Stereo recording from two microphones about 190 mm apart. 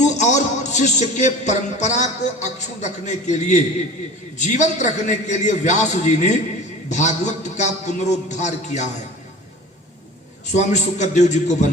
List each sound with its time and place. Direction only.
0.0 s a man's voice: 40° left (ahead or behind)
10.5 s a man's voice: 40° left (ahead or behind)